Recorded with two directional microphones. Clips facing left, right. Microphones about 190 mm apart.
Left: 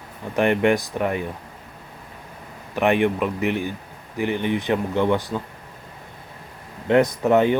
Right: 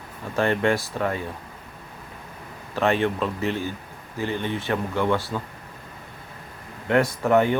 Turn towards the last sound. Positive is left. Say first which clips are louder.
# left 2 dB
turn(degrees=20)  # may be behind; listen again after turning